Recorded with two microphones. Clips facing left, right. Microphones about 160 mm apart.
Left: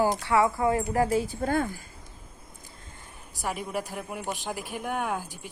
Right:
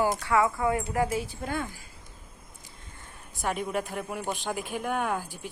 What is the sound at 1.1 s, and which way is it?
Speech, 40° left (ahead or behind).